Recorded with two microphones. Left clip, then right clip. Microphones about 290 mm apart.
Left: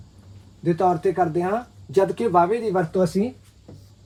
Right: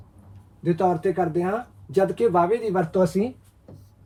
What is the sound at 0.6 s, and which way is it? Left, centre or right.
Speech, centre.